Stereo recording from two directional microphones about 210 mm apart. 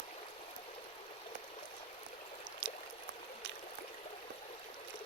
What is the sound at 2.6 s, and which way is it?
Pour, 55° right (ahead or behind).